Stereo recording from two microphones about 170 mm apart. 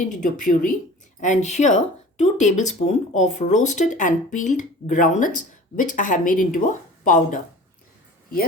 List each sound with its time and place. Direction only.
0.2 s speech: 50° left (ahead or behind)